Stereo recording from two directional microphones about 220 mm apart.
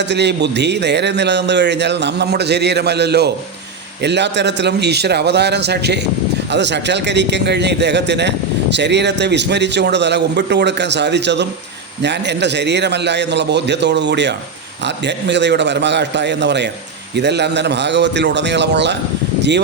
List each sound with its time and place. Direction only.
0.0 s a man's voice: 50° right (ahead or behind)